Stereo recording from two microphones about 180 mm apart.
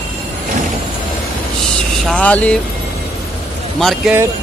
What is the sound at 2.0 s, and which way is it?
Speech, 5° left (ahead or behind).